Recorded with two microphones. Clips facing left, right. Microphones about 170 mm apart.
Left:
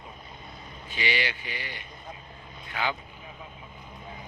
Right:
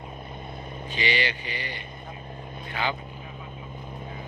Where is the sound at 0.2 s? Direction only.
55° right (ahead or behind).